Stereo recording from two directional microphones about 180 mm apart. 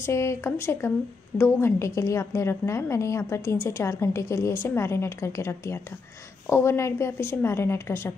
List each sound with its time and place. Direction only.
0.0 s a woman's voice: 15° left (ahead or behind)